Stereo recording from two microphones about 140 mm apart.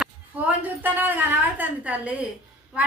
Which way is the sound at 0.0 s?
10° right (ahead or behind).